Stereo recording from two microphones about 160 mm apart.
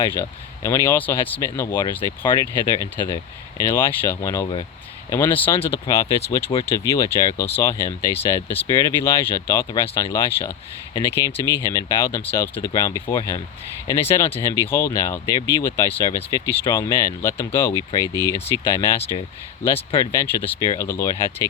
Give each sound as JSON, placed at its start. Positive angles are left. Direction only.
{"t": 0.0, "sound": "speech", "side_deg": 20}